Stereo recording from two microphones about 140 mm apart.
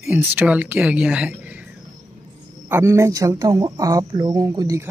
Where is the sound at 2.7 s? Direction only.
15° right (ahead or behind).